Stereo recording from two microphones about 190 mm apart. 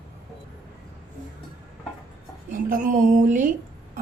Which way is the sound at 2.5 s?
45° right (ahead or behind).